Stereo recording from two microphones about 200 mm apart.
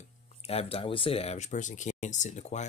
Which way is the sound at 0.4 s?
30° left (ahead or behind).